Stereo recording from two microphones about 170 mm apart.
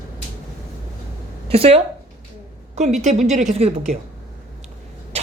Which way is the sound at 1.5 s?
35° right (ahead or behind).